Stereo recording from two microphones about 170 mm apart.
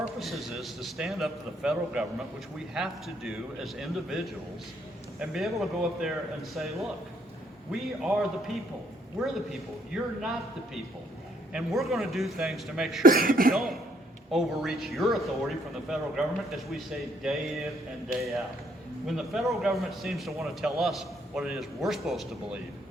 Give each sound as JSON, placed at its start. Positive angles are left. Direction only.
{"t": 0.2, "sound": "a man's voice", "side_deg": 0}
{"t": 5.2, "sound": "a man's voice", "side_deg": 0}
{"t": 11.5, "sound": "a man's voice", "side_deg": 0}
{"t": 13.0, "sound": "cough", "side_deg": -60}
{"t": 13.5, "sound": "a man's voice", "side_deg": 0}
{"t": 19.0, "sound": "a man's voice", "side_deg": 0}